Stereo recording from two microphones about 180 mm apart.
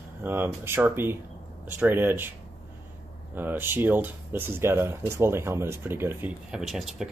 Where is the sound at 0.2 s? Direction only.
10° right (ahead or behind).